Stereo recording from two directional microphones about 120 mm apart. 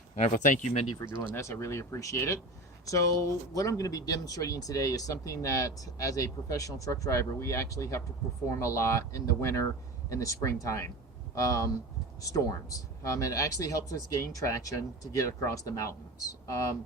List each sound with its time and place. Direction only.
0.4 s speech: 90° left
1.4 s speech: 25° left (ahead or behind)